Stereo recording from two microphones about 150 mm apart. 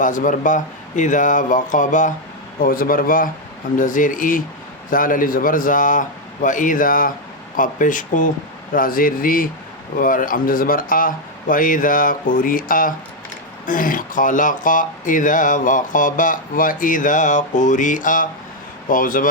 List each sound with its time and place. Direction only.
0.0 s speech: 60° left (ahead or behind)
2.6 s speech: 70° left (ahead or behind)